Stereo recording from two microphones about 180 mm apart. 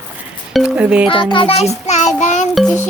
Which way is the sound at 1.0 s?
30° left (ahead or behind).